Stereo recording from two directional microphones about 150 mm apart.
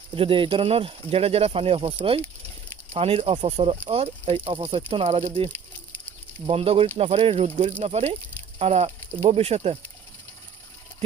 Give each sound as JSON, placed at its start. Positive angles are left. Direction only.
{"t": 0.2, "sound": "speech", "side_deg": -35}
{"t": 6.5, "sound": "speech", "side_deg": -40}